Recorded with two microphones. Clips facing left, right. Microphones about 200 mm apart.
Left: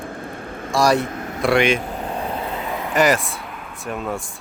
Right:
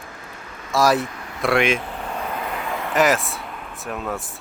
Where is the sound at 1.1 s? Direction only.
45° left (ahead or behind).